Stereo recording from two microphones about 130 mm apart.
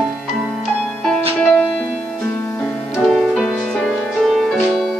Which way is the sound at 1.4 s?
5° left (ahead or behind).